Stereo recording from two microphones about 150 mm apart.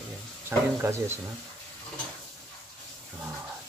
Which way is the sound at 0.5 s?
15° right (ahead or behind).